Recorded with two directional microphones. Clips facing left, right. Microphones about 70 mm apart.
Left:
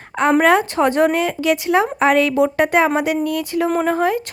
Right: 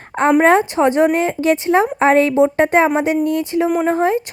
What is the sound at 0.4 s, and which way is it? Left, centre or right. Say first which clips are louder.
A woman's voice: right 2 dB; right.